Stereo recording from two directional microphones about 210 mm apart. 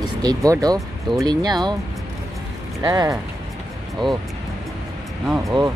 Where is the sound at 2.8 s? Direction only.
20° right (ahead or behind).